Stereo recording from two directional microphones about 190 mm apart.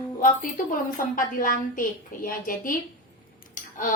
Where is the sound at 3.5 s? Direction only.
45° left (ahead or behind).